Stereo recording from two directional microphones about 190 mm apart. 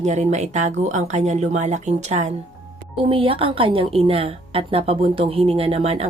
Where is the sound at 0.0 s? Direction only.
40° right (ahead or behind).